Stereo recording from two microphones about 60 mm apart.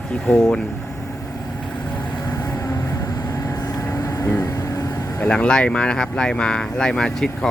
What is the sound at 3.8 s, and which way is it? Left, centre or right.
Vehicle, left.